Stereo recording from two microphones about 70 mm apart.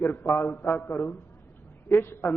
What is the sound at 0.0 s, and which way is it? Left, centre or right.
A man's voice, left.